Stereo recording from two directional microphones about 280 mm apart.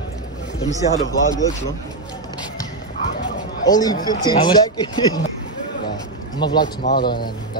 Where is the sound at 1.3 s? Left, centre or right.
Centre.